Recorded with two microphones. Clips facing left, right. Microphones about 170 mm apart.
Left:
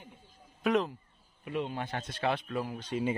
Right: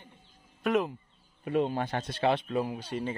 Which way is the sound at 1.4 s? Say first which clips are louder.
Right 6 dB; 35° right (ahead or behind).